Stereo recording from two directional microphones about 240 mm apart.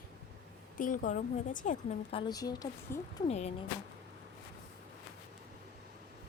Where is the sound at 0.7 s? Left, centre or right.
Left.